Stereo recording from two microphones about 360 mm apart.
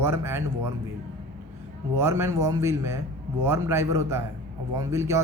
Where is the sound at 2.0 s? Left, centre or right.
Centre.